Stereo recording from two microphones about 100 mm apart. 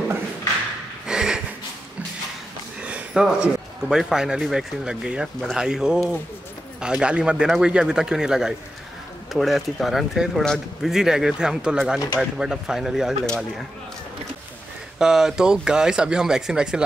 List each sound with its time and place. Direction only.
1.0 s a sound: 5° right (ahead or behind)
2.8 s sniff: 10° right (ahead or behind)
3.9 s speech: 5° right (ahead or behind)
10.9 s speech: 5° right (ahead or behind)
15.0 s speech: 5° right (ahead or behind)